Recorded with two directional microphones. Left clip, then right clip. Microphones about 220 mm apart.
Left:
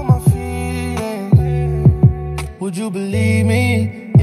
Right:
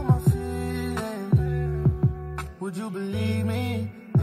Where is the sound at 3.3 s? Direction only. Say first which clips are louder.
Left 12 dB; 45° left (ahead or behind).